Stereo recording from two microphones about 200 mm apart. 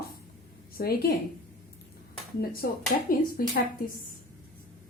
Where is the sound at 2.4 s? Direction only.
45° left (ahead or behind).